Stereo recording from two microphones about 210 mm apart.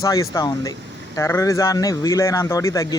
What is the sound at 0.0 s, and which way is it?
Speech, 15° left (ahead or behind).